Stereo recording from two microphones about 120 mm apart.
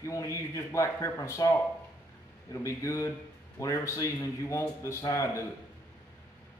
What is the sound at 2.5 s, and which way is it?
A man's voice, 25° left (ahead or behind).